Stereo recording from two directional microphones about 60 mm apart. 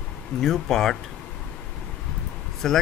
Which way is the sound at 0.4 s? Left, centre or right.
Centre.